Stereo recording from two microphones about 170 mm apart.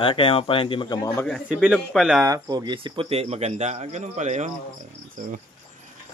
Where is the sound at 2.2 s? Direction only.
20° right (ahead or behind); by 4.5 s 45° right (ahead or behind).